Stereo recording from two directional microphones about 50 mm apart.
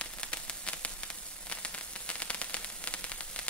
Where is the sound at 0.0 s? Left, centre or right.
Left.